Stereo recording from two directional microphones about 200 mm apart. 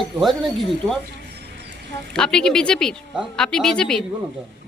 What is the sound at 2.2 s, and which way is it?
Speech, 5° left (ahead or behind).